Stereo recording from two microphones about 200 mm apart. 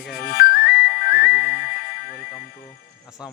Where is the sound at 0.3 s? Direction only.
50° left (ahead or behind).